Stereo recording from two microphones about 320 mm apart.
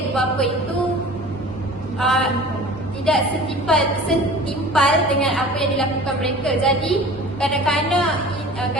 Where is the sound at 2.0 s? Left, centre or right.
Centre.